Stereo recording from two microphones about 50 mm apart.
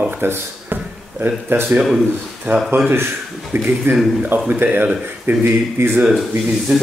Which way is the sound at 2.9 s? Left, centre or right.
Right.